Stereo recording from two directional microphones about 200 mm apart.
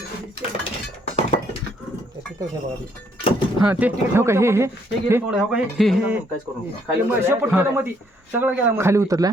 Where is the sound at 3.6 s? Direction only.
5° right (ahead or behind).